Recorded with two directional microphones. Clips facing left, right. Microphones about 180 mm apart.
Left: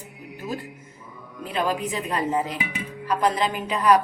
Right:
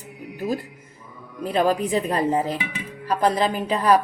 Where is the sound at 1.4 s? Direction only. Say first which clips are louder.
Right 5 dB; 40° right (ahead or behind).